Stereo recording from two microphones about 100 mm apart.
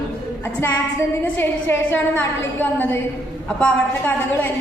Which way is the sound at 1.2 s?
20° left (ahead or behind).